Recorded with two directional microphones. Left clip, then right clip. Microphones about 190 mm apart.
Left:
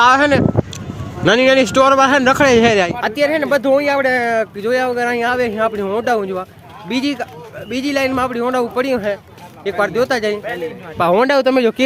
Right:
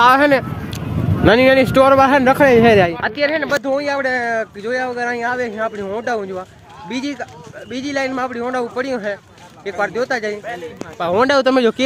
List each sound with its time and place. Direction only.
0.0 s speech: centre (ahead or behind)
2.3 s speech: 15° left (ahead or behind)
10.4 s a man's voice: 55° left (ahead or behind)
11.3 s speech: centre (ahead or behind)